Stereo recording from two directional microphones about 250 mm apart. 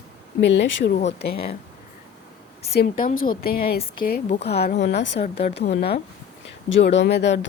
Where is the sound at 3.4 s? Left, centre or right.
Left.